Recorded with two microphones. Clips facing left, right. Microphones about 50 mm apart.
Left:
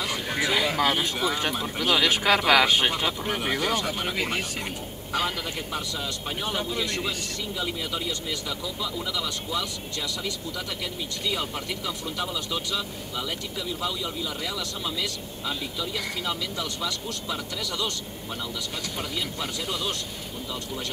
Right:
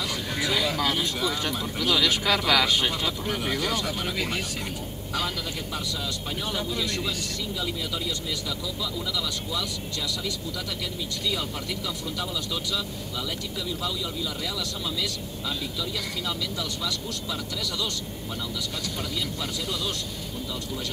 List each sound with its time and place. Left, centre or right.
0.1 s speech: left
6.4 s speech: left
9.1 s speech: left
15.8 s speech: left